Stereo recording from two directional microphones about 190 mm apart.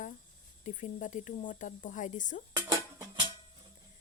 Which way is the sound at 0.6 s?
40° left (ahead or behind).